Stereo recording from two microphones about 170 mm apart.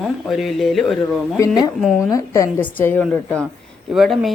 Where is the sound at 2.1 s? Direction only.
15° left (ahead or behind).